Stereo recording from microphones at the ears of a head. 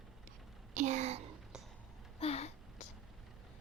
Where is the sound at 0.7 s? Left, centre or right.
Right.